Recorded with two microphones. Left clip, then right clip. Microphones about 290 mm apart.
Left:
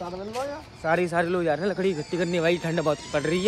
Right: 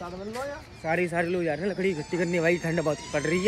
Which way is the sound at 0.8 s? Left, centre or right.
Centre.